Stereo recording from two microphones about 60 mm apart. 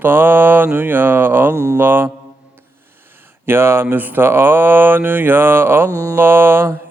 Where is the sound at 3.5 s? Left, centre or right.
Right.